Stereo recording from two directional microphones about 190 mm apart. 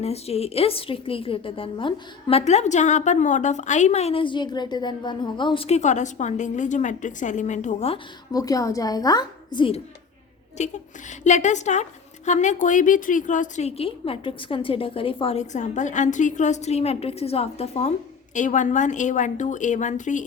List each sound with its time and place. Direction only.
0.0 s a woman's voice: 35° left (ahead or behind)
8.3 s a woman's voice: 20° left (ahead or behind)
10.6 s a woman's voice: 40° left (ahead or behind)